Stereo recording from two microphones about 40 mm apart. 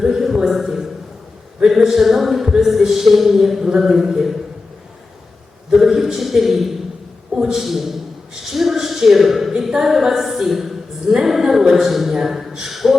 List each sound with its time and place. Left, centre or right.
0.0 s speech: centre
5.7 s a man's voice: centre
8.5 s a sound: centre
9.6 s a woman's voice: centre